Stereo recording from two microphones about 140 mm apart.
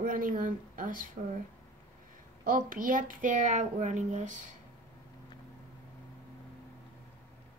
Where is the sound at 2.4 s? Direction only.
80° right; by 4.5 s 65° right (ahead or behind).